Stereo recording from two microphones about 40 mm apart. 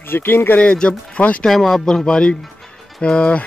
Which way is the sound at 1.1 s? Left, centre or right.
Left.